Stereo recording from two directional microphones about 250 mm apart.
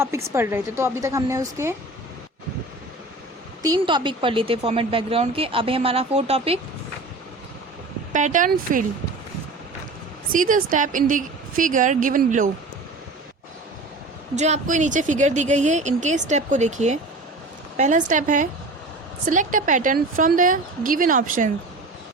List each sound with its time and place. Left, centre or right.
0.0 s a woman's voice: centre
3.6 s speech: centre
8.1 s a woman's voice: right
10.3 s a woman's voice: right
14.3 s a woman's voice: right